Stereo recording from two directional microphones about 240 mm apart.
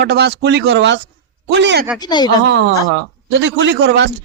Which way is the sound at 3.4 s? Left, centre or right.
Right.